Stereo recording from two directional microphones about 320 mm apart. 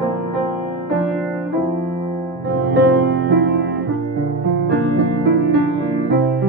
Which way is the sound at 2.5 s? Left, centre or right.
Right.